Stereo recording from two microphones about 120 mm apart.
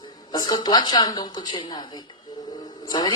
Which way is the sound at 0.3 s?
35° left (ahead or behind).